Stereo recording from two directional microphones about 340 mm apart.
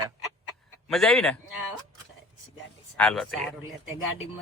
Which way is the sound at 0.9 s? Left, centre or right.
Centre.